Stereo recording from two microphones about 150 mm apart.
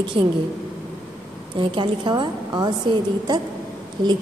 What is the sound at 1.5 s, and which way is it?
A woman's voice, 35° right (ahead or behind).